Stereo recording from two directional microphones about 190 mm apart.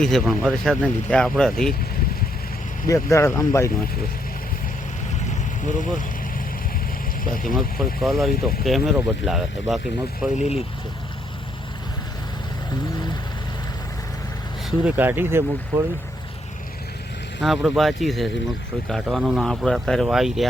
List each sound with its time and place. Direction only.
0.0 s speech: centre (ahead or behind)
2.8 s speech: 15° left (ahead or behind)
5.6 s speech: 40° left (ahead or behind)
7.4 s speech: centre (ahead or behind)
14.8 s speech: 10° right (ahead or behind)
17.4 s speech: centre (ahead or behind)